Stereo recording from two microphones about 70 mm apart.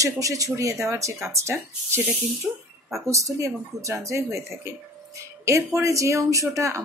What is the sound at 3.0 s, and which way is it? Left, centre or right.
Speech, right.